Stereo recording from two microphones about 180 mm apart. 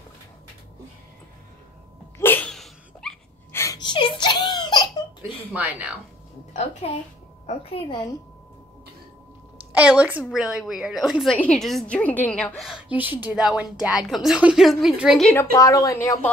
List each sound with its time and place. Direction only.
2.1 s dog: 10° left (ahead or behind)
3.5 s giggle: 20° left (ahead or behind)
5.5 s speech: 10° right (ahead or behind)
6.5 s a woman's voice: 40° left (ahead or behind)
9.7 s a woman's voice: 5° right (ahead or behind)
15.5 s speech: 20° left (ahead or behind)